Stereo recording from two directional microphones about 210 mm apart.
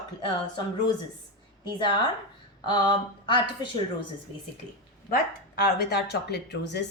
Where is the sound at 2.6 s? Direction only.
20° left (ahead or behind).